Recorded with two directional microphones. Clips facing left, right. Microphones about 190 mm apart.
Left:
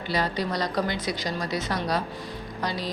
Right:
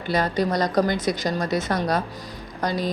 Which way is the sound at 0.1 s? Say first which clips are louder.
Right 5 dB; 45° right (ahead or behind).